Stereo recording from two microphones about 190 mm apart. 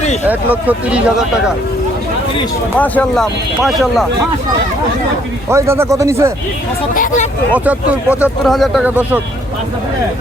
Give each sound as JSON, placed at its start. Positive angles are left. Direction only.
{"t": 0.3, "sound": "speech", "side_deg": -10}
{"t": 2.7, "sound": "speech", "side_deg": 10}
{"t": 5.5, "sound": "speech", "side_deg": -15}
{"t": 6.9, "sound": "speech", "side_deg": 45}
{"t": 7.5, "sound": "speech", "side_deg": -5}